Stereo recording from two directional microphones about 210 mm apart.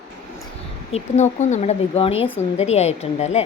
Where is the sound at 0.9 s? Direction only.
35° left (ahead or behind).